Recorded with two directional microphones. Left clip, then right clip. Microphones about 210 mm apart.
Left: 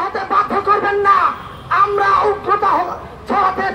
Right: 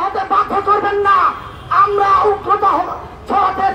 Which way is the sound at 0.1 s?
20° left (ahead or behind).